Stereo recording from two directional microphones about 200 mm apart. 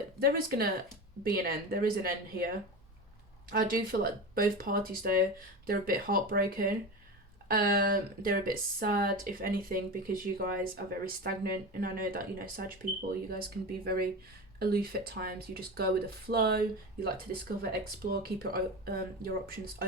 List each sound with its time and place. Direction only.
0.2 s speech: 50° right (ahead or behind)
3.5 s speech: 45° right (ahead or behind)